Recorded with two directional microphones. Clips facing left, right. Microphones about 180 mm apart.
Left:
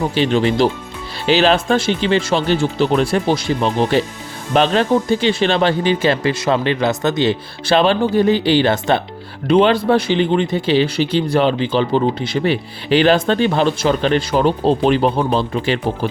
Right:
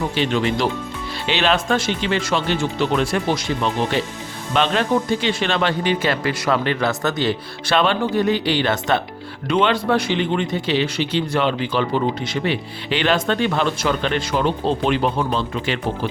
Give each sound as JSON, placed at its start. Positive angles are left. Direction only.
{"t": 0.2, "sound": "speech", "side_deg": 35}